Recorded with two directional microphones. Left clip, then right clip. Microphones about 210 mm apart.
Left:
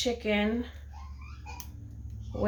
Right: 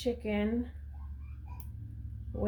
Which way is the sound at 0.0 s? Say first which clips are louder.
Left 5 dB; 20° right (ahead or behind).